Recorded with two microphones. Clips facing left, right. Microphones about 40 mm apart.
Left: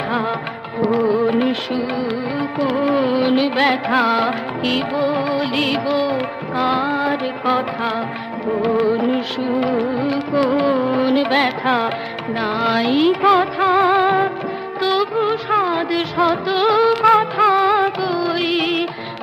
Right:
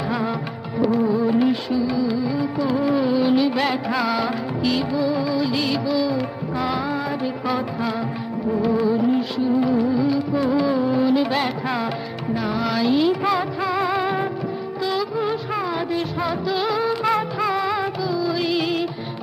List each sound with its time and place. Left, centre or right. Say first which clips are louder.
0.9 s music: left 5 dB; left
1.2 s music: left 2 dB; left
3.3 s music of bollywood: left 3 dB; left
5.2 s music: left 3 dB; left
12.4 s music: left 5 dB; left
12.9 s music of bollywood: left 6 dB; left
14.8 s music of bollywood: left 6 dB; left
17.6 s music: left 7 dB; left
18.0 s music: left 3 dB; left